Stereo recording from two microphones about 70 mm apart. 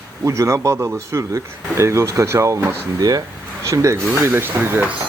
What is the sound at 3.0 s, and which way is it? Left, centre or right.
Speech, right.